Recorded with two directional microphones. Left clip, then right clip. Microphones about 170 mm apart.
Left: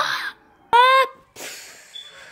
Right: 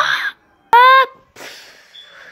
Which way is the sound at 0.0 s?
15° right (ahead or behind).